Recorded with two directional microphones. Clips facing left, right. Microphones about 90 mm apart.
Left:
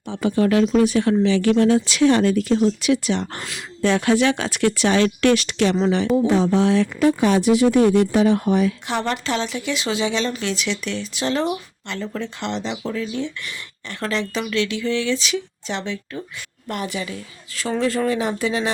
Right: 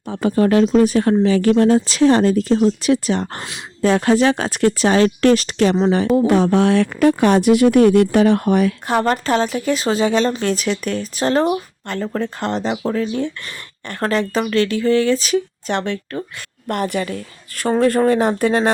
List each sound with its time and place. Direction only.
0.1 s speech: 40° right (ahead or behind)
6.1 s speech: 60° right (ahead or behind)
9.0 s speech: 45° right (ahead or behind)